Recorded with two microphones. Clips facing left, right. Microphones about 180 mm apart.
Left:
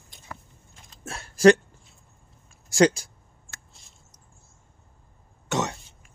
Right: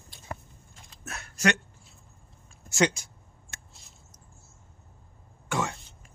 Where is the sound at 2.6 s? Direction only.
35° left (ahead or behind).